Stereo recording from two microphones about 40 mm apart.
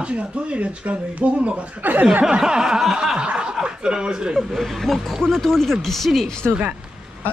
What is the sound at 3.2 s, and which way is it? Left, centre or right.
Snicker, right.